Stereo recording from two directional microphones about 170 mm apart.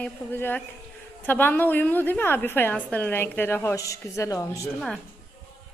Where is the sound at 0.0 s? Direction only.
10° left (ahead or behind).